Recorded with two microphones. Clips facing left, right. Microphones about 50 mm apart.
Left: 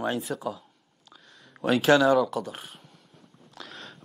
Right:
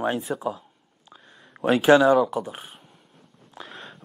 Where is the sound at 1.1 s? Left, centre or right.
Right.